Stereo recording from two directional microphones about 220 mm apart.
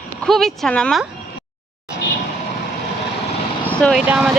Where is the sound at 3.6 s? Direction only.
5° left (ahead or behind).